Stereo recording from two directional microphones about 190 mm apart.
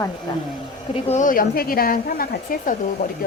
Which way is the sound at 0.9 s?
40° left (ahead or behind).